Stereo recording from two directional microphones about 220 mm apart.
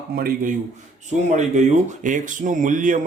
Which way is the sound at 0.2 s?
40° right (ahead or behind).